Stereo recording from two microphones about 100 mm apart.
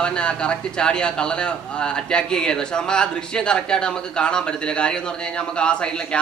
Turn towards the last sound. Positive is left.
turn(degrees=10)  # may be behind; listen again after turning